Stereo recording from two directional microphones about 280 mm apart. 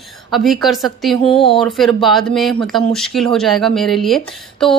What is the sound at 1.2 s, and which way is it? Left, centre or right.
Speech, centre.